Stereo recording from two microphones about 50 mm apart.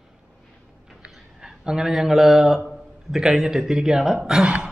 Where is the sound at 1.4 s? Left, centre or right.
Centre.